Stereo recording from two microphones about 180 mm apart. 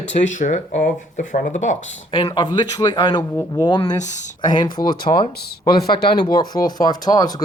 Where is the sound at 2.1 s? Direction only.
25° left (ahead or behind).